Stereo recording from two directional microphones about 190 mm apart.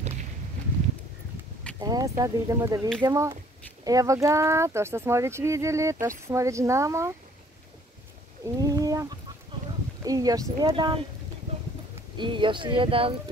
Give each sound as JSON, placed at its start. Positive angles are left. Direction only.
{"t": 1.8, "sound": "speech", "side_deg": -20}
{"t": 8.5, "sound": "a sound", "side_deg": -20}
{"t": 10.0, "sound": "speech", "side_deg": -20}
{"t": 12.2, "sound": "speech", "side_deg": -25}